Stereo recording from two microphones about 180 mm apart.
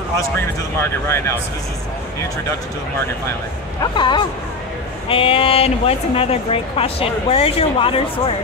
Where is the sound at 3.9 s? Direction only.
25° left (ahead or behind).